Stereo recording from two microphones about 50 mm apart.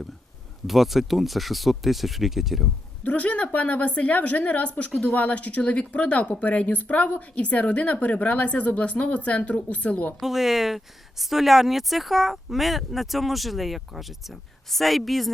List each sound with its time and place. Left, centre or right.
0.7 s speech: centre
3.0 s speech: left
10.2 s speech: centre